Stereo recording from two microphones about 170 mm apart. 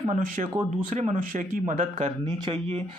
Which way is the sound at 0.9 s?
45° right (ahead or behind).